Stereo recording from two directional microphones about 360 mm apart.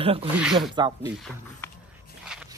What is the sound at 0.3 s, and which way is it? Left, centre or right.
Speech, centre.